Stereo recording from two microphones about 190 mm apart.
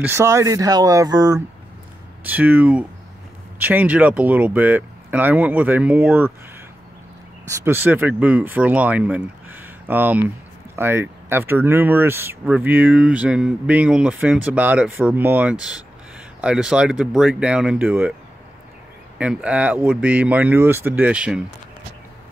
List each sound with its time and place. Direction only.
0.0 s speech: 15° right (ahead or behind)
2.2 s speech: 10° right (ahead or behind)
7.6 s speech: 10° right (ahead or behind)
19.1 s speech: 5° right (ahead or behind)